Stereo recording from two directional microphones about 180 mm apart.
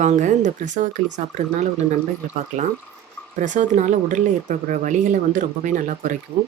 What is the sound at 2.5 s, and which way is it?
Speech, 45° right (ahead or behind).